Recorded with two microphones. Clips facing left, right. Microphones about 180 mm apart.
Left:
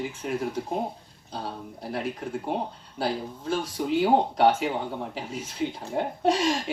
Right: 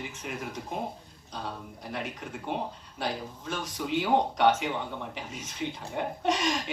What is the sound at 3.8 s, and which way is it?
Speech, 35° left (ahead or behind).